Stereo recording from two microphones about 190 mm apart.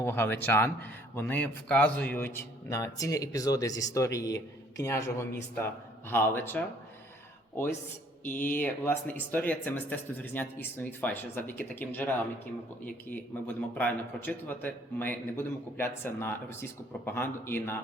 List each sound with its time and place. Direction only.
0.0 s speech: 10° left (ahead or behind)
8.2 s speech: 10° left (ahead or behind)